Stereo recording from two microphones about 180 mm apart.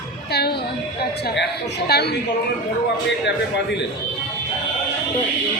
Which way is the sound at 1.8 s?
65° left (ahead or behind).